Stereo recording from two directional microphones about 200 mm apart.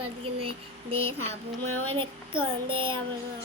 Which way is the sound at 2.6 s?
25° right (ahead or behind).